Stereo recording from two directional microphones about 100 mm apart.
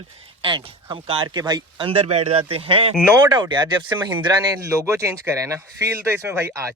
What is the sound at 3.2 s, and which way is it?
Speech, 50° right (ahead or behind).